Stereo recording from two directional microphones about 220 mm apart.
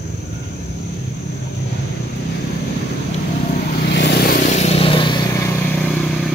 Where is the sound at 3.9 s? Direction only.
50° left (ahead or behind); by 5.5 s 20° left (ahead or behind).